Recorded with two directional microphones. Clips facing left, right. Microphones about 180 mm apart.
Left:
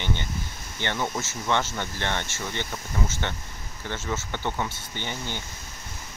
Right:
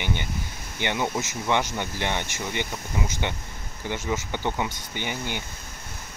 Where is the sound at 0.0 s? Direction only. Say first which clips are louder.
Right 1 dB; 15° right (ahead or behind).